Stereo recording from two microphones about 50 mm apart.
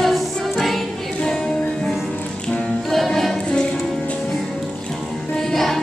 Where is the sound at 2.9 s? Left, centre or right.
Centre.